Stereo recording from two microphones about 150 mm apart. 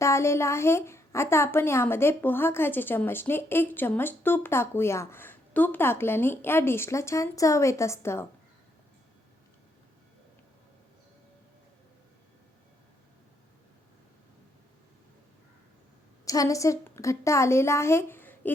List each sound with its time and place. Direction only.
0.0 s a woman's voice: 20° left (ahead or behind)
16.2 s a woman's voice: 25° left (ahead or behind)